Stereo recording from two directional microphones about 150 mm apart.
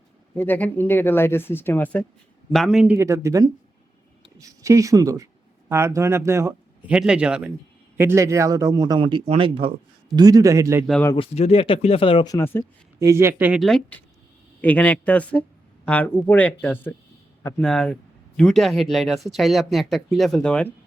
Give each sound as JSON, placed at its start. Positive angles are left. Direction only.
{"t": 0.3, "sound": "speech", "side_deg": 10}
{"t": 2.5, "sound": "speech", "side_deg": 0}
{"t": 6.9, "sound": "a man's voice", "side_deg": -5}
{"t": 10.2, "sound": "a man's voice", "side_deg": -25}
{"t": 11.3, "sound": "speech", "side_deg": 40}
{"t": 12.3, "sound": "speech", "side_deg": 20}
{"t": 13.0, "sound": "speech", "side_deg": -20}
{"t": 13.6, "sound": "speech", "side_deg": 5}